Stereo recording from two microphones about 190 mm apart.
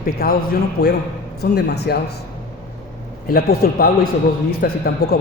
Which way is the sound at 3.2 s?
50° left (ahead or behind).